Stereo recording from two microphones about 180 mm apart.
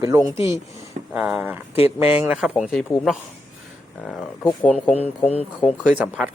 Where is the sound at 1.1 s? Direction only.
5° right (ahead or behind).